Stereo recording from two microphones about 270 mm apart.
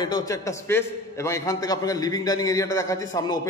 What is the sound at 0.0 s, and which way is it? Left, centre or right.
A man's voice, centre.